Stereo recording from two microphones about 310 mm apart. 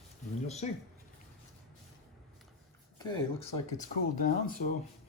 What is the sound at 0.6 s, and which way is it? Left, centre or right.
Speech, left.